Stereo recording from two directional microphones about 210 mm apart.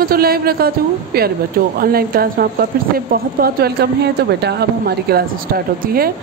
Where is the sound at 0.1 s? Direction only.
45° right (ahead or behind).